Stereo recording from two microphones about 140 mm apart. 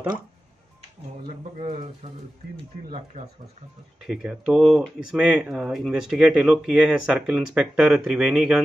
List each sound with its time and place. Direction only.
1.6 s speech: 50° right (ahead or behind)
4.0 s speech: 5° right (ahead or behind)